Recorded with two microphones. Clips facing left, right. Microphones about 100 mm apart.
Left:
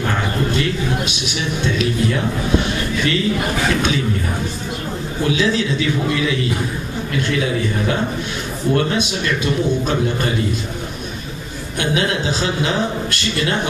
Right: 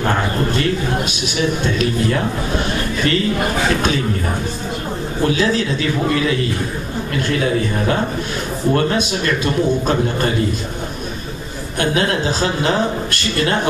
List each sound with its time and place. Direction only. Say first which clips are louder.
0.0 s a sound: right 2 dB; 45° right (ahead or behind)
1.6 s speech: right 1 dB; 40° right (ahead or behind)
5.2 s a man's voice: right 1 dB; 40° right (ahead or behind)
8.7 s speech: even; 40° right (ahead or behind)
11.8 s a man's voice: right 2 dB; 45° right (ahead or behind)